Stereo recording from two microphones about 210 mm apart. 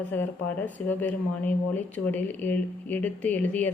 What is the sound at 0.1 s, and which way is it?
A woman's voice, 10° left (ahead or behind).